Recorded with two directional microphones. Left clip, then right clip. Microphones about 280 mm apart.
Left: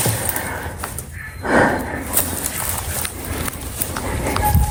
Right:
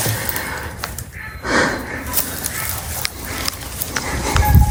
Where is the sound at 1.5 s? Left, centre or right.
Centre.